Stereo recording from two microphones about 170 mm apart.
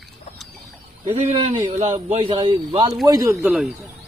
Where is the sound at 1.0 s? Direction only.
35° right (ahead or behind).